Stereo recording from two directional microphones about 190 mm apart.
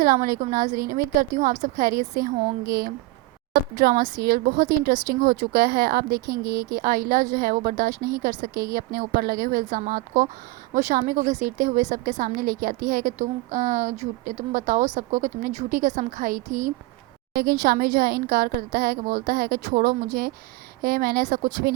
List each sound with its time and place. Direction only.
0.0 s a woman's voice: 50° right (ahead or behind)
7.9 s speech: 20° right (ahead or behind)
8.2 s a woman's voice: 45° right (ahead or behind)